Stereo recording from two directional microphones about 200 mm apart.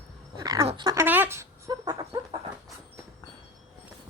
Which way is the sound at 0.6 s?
20° right (ahead or behind).